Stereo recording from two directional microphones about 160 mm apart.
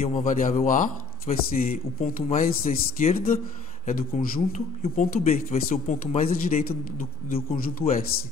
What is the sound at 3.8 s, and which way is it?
A man's voice, 60° left (ahead or behind).